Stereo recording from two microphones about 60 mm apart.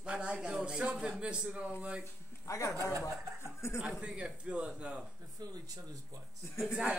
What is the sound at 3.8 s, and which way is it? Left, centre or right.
A woman's voice, centre.